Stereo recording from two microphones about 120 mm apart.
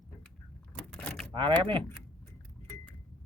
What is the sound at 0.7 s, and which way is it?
Vehicle, 10° left (ahead or behind).